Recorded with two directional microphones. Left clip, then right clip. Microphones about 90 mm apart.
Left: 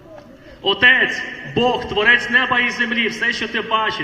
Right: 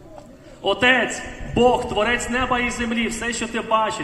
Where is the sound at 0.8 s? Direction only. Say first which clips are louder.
Left 5 dB; 30° right (ahead or behind).